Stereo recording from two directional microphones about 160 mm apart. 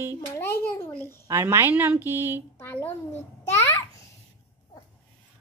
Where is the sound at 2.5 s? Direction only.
15° left (ahead or behind).